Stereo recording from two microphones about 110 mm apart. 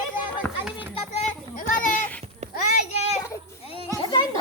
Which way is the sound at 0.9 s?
75° left (ahead or behind).